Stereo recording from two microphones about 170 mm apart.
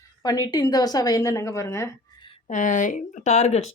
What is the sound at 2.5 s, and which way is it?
Speech, 50° left (ahead or behind).